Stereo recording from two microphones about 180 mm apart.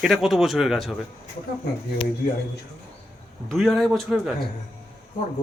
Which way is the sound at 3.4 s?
Centre (ahead or behind).